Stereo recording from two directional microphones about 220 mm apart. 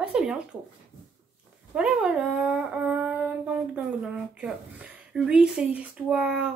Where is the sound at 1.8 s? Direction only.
5° right (ahead or behind).